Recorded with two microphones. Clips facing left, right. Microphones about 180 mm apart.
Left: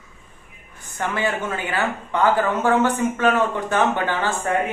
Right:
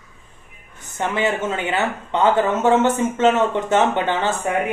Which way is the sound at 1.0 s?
20° right (ahead or behind).